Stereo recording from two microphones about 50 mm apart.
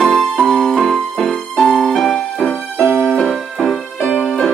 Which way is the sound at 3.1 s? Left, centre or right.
Centre.